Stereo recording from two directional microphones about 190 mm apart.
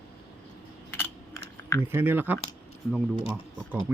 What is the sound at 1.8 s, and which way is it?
Speech, 10° right (ahead or behind).